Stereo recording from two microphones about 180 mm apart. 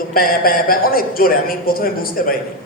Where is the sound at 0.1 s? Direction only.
55° left (ahead or behind).